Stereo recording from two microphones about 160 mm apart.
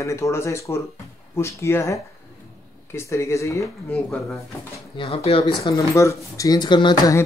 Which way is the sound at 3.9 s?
5° left (ahead or behind).